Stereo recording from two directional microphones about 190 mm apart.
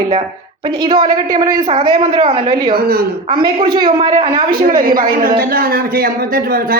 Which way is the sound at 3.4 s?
25° right (ahead or behind).